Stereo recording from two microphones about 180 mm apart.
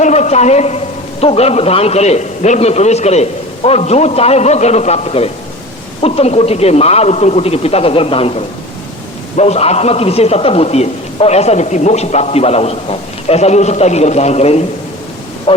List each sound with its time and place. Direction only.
0.0 s a man's voice: 40° left (ahead or behind)